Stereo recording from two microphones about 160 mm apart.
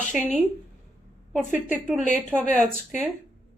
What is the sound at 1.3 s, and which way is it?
Speech, 10° right (ahead or behind).